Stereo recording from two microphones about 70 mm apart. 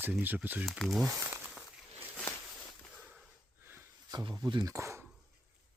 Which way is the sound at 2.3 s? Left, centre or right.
Left.